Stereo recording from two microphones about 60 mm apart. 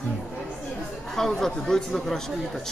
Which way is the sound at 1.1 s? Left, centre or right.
Centre.